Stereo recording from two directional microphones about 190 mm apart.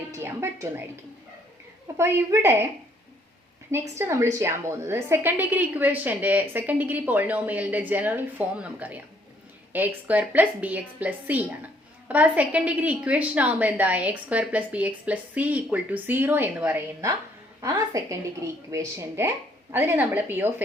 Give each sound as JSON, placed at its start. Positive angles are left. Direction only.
{"t": 0.1, "sound": "a woman's voice", "side_deg": -15}
{"t": 2.0, "sound": "a woman's voice", "side_deg": -15}
{"t": 3.7, "sound": "a woman's voice", "side_deg": -15}